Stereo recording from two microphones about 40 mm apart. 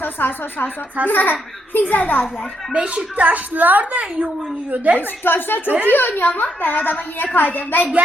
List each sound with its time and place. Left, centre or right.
0.0 s a child's voice: left
2.7 s a woman's voice: right
4.9 s a child's voice: left